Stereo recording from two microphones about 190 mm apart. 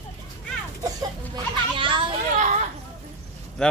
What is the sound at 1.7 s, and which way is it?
Hubbub, 25° right (ahead or behind).